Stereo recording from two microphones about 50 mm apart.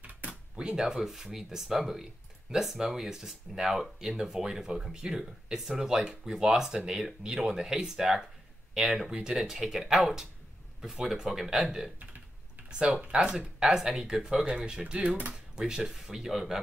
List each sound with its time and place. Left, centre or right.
0.0 s drawer open or close: right
0.6 s speech: centre
12.6 s a sound: centre
13.1 s speech: centre
15.3 s speech: centre